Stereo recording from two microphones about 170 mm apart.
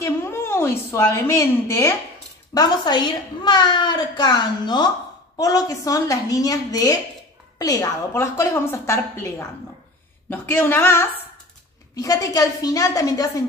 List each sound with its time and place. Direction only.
0.0 s a woman's voice: 15° left (ahead or behind)